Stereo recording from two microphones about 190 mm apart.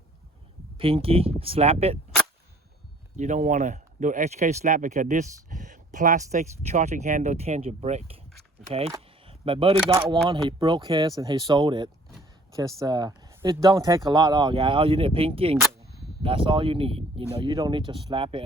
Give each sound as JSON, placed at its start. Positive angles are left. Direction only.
{"t": 0.8, "sound": "speech", "side_deg": -30}
{"t": 3.2, "sound": "speech", "side_deg": -40}
{"t": 8.6, "sound": "speech", "side_deg": 0}
{"t": 9.2, "sound": "camera", "side_deg": -30}
{"t": 10.2, "sound": "speech", "side_deg": -25}